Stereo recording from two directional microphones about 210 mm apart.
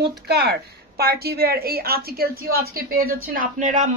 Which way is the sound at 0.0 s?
50° right (ahead or behind).